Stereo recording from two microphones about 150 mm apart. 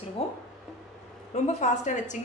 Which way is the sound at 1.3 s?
50° left (ahead or behind).